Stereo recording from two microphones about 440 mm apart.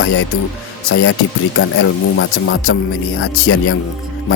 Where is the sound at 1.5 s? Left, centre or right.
Left.